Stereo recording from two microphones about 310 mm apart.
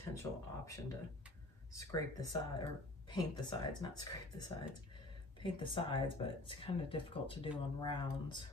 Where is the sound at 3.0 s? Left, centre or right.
Centre.